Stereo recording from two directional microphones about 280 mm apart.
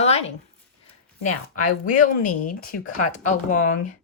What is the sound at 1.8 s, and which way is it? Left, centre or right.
Speech, left.